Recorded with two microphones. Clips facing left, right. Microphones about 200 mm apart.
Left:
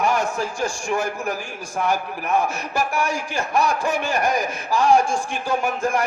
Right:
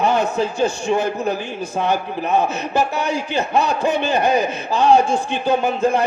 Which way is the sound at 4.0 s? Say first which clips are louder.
Right 5 dB; 25° right (ahead or behind).